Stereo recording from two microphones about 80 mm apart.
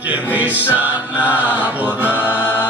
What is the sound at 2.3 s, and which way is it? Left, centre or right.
Music, left.